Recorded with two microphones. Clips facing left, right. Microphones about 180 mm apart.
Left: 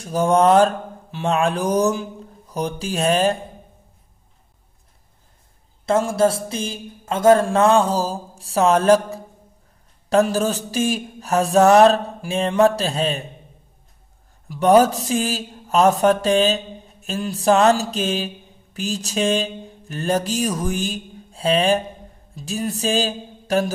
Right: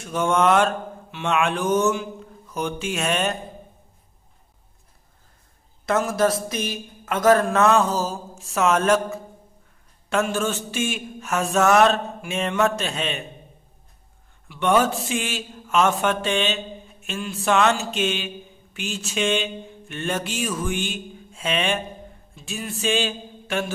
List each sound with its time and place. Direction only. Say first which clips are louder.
0.0 s a man's voice: left 4 dB; 35° left (ahead or behind)
5.9 s a man's voice: left 3 dB; 30° left (ahead or behind)
14.5 s a man's voice: left 6 dB; 40° left (ahead or behind)
22.3 s a sound: left 7 dB; 40° left (ahead or behind)